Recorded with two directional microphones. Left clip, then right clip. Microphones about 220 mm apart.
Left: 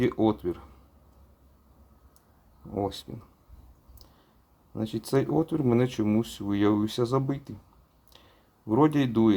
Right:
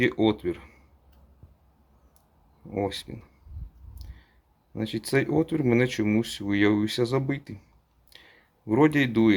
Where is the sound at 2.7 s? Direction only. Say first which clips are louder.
Right 2 dB; centre (ahead or behind).